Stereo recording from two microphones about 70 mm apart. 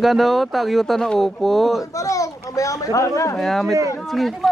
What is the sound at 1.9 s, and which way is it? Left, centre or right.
Speech, left.